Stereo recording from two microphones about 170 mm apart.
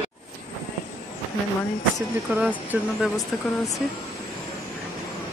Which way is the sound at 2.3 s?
10° right (ahead or behind).